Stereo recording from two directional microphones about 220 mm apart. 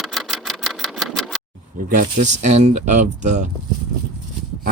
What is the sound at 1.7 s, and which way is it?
Speech, 40° right (ahead or behind).